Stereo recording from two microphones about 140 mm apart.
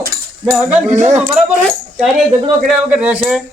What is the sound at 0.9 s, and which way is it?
Speech, 55° right (ahead or behind).